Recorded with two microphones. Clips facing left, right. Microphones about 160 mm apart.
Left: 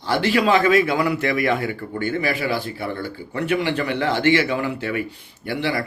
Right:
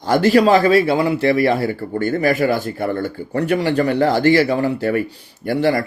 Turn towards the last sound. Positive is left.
turn(degrees=-40)  # may be behind; listen again after turning